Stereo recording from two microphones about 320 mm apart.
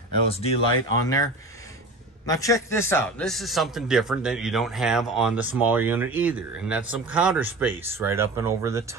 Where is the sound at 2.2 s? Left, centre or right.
Centre.